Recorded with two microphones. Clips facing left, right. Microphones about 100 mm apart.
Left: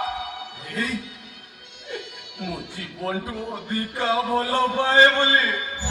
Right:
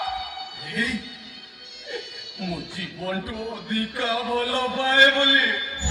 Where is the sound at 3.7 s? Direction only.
35° left (ahead or behind).